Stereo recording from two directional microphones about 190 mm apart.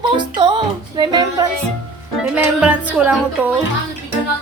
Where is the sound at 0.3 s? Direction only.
25° right (ahead or behind).